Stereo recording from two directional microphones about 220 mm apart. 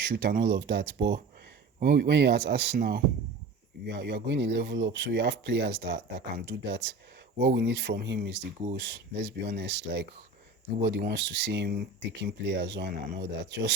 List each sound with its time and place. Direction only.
0.0 s speech: 50° right (ahead or behind)